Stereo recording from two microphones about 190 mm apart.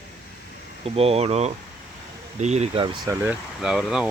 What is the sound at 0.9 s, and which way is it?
Speech, 30° right (ahead or behind).